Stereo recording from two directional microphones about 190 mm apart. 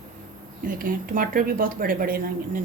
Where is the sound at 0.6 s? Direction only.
45° right (ahead or behind).